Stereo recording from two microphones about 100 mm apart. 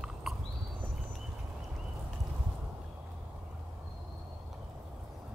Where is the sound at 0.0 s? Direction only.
5° right (ahead or behind).